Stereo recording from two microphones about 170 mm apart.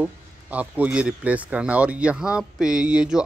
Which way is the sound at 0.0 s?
10° right (ahead or behind).